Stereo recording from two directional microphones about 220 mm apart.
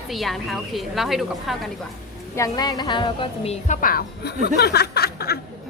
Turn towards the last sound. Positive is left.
turn(degrees=45)  # may be behind; listen again after turning